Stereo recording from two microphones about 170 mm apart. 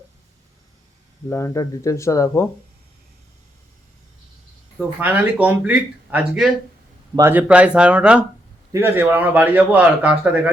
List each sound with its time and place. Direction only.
1.3 s speech: 15° left (ahead or behind)
4.9 s a man's voice: 10° right (ahead or behind)